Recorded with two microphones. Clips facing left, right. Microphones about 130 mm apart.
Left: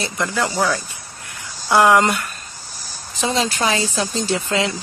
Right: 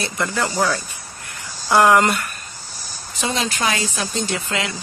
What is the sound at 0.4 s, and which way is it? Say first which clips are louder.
Speech: left 1 dB; 10° left (ahead or behind).